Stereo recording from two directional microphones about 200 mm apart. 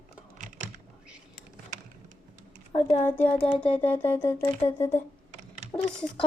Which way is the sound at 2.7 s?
25° left (ahead or behind).